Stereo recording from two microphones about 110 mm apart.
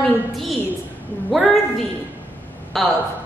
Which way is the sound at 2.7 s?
Centre (ahead or behind).